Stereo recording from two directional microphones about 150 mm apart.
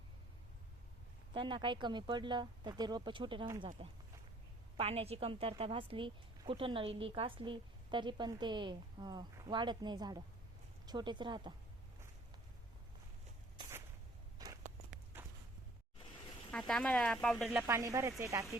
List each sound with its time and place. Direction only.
1.3 s a woman's voice: 35° right (ahead or behind)
14.3 s a sound: 25° right (ahead or behind)
16.5 s speech: 5° left (ahead or behind)
17.6 s speech: 20° right (ahead or behind)